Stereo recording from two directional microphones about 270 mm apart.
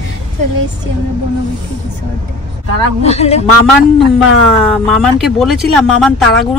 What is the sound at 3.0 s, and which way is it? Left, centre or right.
Speech, left.